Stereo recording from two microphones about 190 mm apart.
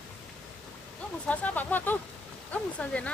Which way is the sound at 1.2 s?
10° left (ahead or behind).